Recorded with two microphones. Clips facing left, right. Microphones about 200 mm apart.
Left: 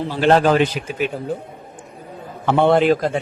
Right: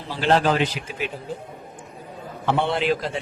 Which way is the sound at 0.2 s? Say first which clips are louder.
Left 5 dB; 50° left (ahead or behind).